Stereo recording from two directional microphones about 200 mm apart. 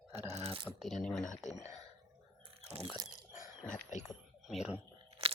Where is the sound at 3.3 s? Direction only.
40° left (ahead or behind).